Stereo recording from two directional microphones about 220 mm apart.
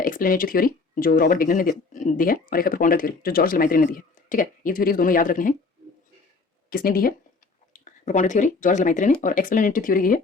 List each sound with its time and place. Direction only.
0.0 s speech: 40° left (ahead or behind)
6.7 s speech: 40° left (ahead or behind)